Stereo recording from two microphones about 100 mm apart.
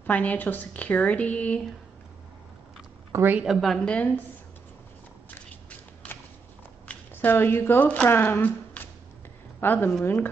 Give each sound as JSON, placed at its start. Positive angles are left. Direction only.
{"t": 0.0, "sound": "a woman's voice", "side_deg": 15}
{"t": 3.1, "sound": "a woman's voice", "side_deg": -25}
{"t": 3.6, "sound": "a woman's voice", "side_deg": 5}
{"t": 6.9, "sound": "speech", "side_deg": 20}